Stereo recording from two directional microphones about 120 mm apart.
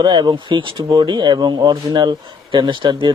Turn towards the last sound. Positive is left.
turn(degrees=-40)  # may be behind; listen again after turning